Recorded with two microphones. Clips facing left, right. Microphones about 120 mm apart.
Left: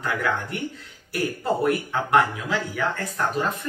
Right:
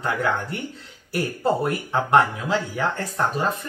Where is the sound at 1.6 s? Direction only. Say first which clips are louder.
Left 1 dB; 30° right (ahead or behind).